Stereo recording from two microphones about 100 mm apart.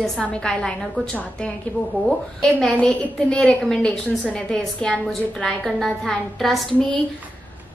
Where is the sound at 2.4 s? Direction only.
5° left (ahead or behind).